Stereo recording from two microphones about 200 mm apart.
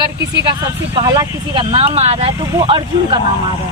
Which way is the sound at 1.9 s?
35° right (ahead or behind).